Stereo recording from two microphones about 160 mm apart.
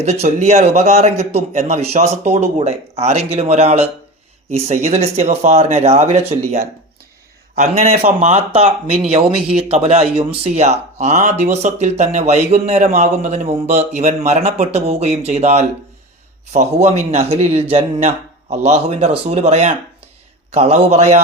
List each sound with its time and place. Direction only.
0.0 s speech: 45° right (ahead or behind)
7.6 s speech: 45° right (ahead or behind)
12.8 s a man's voice: 65° right (ahead or behind)
13.2 s speech: 40° right (ahead or behind)